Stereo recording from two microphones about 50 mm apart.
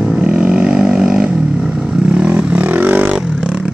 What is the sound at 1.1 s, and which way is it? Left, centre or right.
Vehicle, centre.